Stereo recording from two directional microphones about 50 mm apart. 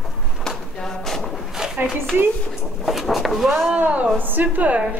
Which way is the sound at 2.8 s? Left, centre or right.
Centre.